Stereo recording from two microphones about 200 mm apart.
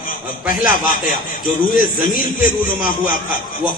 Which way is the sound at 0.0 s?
45° left (ahead or behind).